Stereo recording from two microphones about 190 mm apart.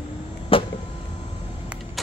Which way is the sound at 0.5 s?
30° left (ahead or behind).